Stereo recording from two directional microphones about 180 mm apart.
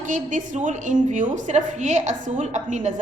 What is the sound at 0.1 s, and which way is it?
A woman's voice, 45° right (ahead or behind).